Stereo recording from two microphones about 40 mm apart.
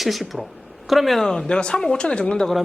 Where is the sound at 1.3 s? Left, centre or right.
Centre.